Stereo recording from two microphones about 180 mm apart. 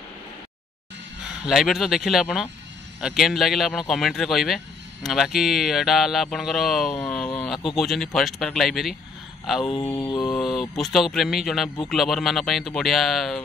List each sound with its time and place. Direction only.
1.2 s speech: centre (ahead or behind)
9.9 s mantra: 25° left (ahead or behind)
10.3 s speech: centre (ahead or behind)